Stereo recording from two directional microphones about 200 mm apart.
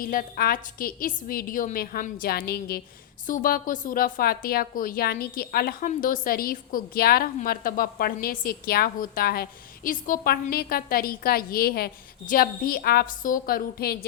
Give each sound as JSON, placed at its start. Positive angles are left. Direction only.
{"t": 0.0, "sound": "a woman's voice", "side_deg": 45}